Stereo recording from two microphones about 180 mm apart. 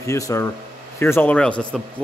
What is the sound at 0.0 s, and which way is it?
Speech, 15° left (ahead or behind).